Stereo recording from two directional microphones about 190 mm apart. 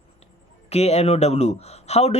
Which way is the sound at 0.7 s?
35° left (ahead or behind).